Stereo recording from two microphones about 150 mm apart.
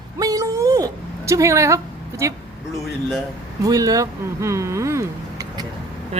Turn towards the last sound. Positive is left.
turn(degrees=-20)  # may be behind; listen again after turning